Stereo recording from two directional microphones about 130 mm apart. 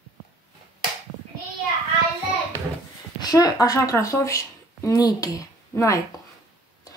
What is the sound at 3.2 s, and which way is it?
A woman's voice, 30° left (ahead or behind).